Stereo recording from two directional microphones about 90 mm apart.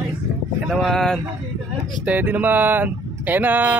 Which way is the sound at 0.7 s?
Centre (ahead or behind).